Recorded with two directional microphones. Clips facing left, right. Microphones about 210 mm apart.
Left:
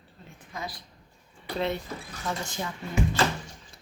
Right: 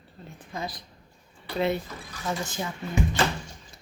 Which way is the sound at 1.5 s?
10° right (ahead or behind).